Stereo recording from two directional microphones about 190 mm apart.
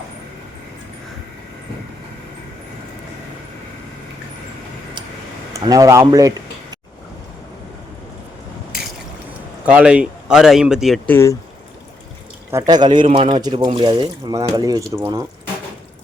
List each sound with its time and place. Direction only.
5.5 s speech: 20° right (ahead or behind)
9.6 s speech: 5° right (ahead or behind); by 11.3 s 10° left (ahead or behind)
12.5 s speech: 20° right (ahead or behind)